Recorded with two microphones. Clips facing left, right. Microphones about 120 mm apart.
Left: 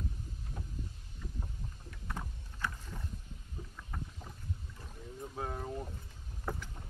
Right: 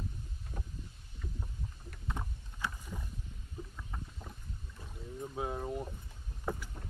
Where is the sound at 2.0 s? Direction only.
20° right (ahead or behind).